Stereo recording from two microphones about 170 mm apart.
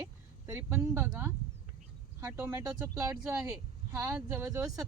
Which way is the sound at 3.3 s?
5° right (ahead or behind).